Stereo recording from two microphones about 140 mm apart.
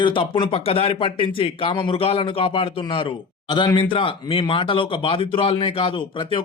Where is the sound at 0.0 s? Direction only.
35° left (ahead or behind).